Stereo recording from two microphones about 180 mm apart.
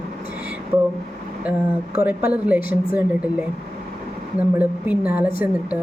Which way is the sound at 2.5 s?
55° left (ahead or behind).